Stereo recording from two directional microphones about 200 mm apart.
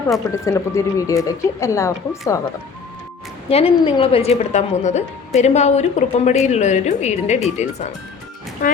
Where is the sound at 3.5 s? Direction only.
30° left (ahead or behind).